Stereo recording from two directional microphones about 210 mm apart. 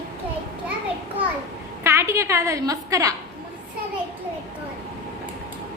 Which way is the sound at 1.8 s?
15° right (ahead or behind).